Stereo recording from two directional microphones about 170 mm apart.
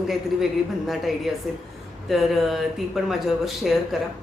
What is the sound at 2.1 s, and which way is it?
A woman's voice, centre (ahead or behind).